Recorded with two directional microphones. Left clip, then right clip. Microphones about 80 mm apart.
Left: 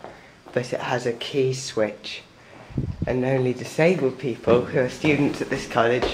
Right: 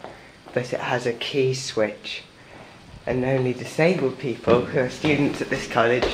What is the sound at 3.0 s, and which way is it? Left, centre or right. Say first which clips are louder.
Speech: even; left.